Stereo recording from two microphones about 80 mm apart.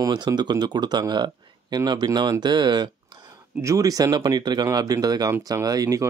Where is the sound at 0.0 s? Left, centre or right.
Right.